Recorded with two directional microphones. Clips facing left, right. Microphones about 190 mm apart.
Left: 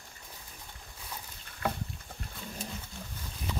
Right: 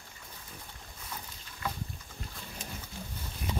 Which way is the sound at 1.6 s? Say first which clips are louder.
Left 4 dB; 60° left (ahead or behind).